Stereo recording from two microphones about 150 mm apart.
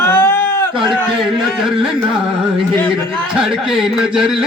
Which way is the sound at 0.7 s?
30° right (ahead or behind).